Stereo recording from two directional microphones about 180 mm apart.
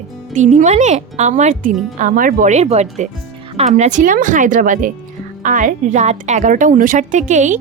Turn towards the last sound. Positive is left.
turn(degrees=-45)  # may be behind; listen again after turning